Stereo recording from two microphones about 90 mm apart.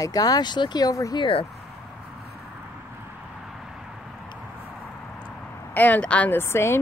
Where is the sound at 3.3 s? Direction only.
5° right (ahead or behind).